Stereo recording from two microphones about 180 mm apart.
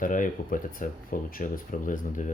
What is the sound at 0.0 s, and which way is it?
Speech, 50° left (ahead or behind).